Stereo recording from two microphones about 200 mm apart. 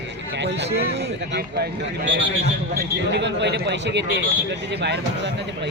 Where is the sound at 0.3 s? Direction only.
60° right (ahead or behind).